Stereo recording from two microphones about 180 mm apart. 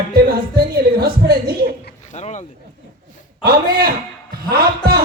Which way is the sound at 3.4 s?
55° right (ahead or behind).